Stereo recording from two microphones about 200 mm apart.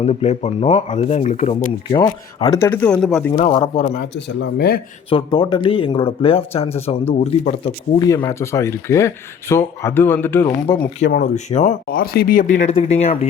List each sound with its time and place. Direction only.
0.0 s speech: 30° left (ahead or behind)
2.0 s speech: 20° left (ahead or behind); by 3.3 s 5° left (ahead or behind)
3.3 s speech: 30° left (ahead or behind)
4.1 s speech: 60° left (ahead or behind)
5.0 s speech: 25° left (ahead or behind)
7.9 s speech: 15° left (ahead or behind)
11.0 s speech: 40° left (ahead or behind)
11.9 s speech: 50° left (ahead or behind); by 13.1 s 30° left (ahead or behind)